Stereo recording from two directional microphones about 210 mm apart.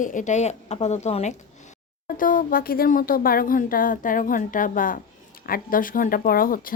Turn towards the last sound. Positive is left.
turn(degrees=40)  # may be behind; listen again after turning